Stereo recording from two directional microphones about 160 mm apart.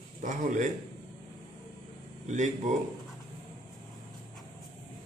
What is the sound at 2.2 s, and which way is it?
Speech, 50° right (ahead or behind).